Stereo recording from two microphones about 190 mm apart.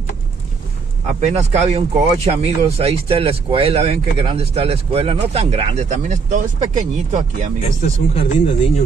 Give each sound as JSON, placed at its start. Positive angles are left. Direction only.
{"t": 1.0, "sound": "speech", "side_deg": -35}
{"t": 8.1, "sound": "speech", "side_deg": 30}